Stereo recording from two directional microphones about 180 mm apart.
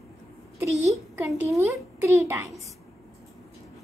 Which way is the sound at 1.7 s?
15° right (ahead or behind).